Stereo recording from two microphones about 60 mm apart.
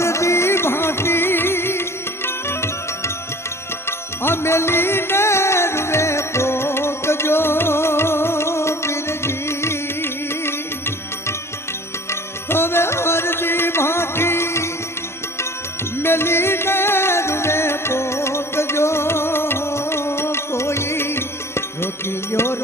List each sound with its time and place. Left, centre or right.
0.0 s music: left
12.5 s music: left
16.0 s music: left